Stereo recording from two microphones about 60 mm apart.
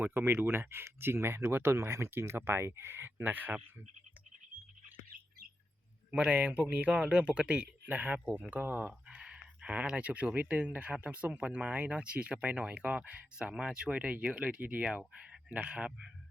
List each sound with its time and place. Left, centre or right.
0.0 s speech: right
6.1 s speech: right
9.0 s speech: centre